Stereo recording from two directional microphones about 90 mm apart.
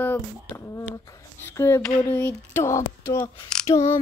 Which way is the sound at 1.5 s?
30° left (ahead or behind).